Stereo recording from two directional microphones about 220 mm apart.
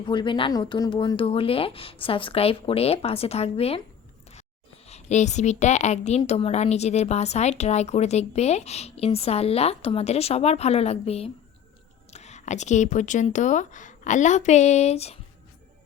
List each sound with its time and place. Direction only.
0.1 s a woman's voice: 20° left (ahead or behind)
4.9 s a woman's voice: 30° left (ahead or behind)